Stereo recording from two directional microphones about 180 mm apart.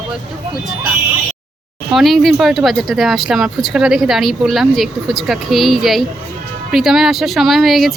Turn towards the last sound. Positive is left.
turn(degrees=0)  # may be behind; listen again after turning